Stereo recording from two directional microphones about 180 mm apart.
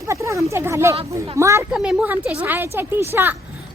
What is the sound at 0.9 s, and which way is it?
Speech, 35° right (ahead or behind).